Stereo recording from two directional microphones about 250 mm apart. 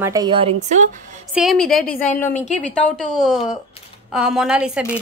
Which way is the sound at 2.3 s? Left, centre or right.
Left.